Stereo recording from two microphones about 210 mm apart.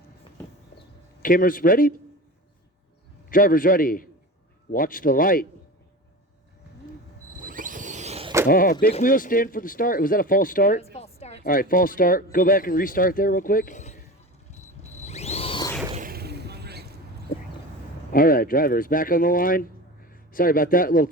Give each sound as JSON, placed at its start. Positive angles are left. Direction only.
{"t": 1.2, "sound": "speech", "side_deg": 40}
{"t": 3.2, "sound": "speech", "side_deg": 40}
{"t": 7.4, "sound": "vehicle", "side_deg": -40}
{"t": 8.4, "sound": "speech", "side_deg": 45}
{"t": 10.9, "sound": "speech", "side_deg": 30}
{"t": 14.8, "sound": "a sound", "side_deg": 30}
{"t": 16.0, "sound": "a sound", "side_deg": -45}
{"t": 17.3, "sound": "a sound", "side_deg": 45}
{"t": 18.1, "sound": "speech", "side_deg": 45}